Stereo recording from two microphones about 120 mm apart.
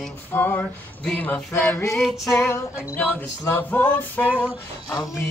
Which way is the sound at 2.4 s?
20° left (ahead or behind).